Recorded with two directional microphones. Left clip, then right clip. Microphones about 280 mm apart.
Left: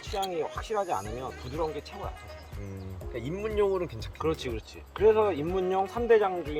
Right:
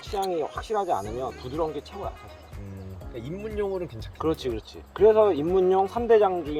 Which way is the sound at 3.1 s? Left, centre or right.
Centre.